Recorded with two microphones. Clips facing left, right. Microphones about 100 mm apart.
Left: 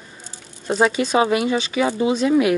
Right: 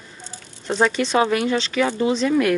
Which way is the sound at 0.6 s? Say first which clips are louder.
Left 1 dB; 10° left (ahead or behind).